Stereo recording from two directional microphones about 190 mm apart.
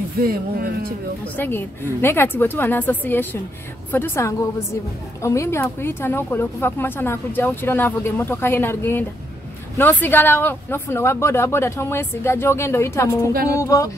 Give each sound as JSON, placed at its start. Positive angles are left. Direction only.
{"t": 0.2, "sound": "speech", "side_deg": -50}
{"t": 1.2, "sound": "speech", "side_deg": 10}